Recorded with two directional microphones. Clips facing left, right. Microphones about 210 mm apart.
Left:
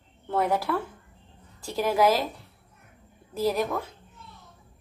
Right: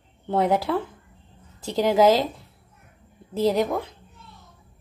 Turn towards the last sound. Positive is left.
turn(degrees=-20)  # may be behind; listen again after turning